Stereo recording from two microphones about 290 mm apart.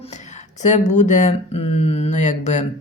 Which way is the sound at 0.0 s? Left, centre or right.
Left.